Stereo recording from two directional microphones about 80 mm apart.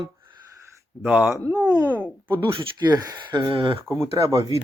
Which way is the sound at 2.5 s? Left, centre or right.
Right.